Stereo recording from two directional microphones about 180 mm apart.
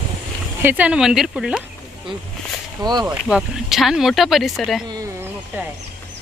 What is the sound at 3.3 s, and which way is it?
Speech, centre (ahead or behind).